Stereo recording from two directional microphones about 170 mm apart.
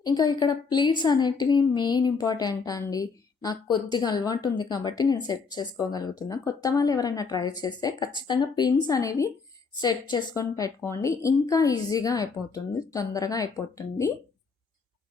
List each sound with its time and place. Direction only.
0.0 s a woman's voice: 25° left (ahead or behind)